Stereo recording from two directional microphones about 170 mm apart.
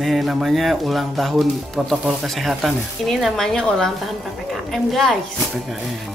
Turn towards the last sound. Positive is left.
turn(degrees=0)  # may be behind; listen again after turning